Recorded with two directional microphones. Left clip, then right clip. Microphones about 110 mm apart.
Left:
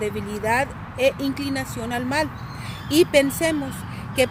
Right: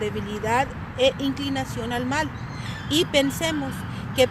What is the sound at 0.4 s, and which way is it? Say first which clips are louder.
Speech: left 1 dB; 30° left (ahead or behind).